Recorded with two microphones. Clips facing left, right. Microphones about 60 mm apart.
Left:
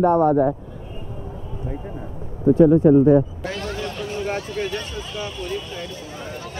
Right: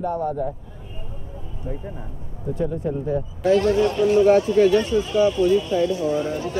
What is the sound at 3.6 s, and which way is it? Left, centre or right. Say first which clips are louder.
Speech: right 10 dB; right.